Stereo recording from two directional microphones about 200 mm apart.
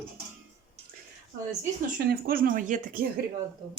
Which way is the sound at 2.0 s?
50° right (ahead or behind).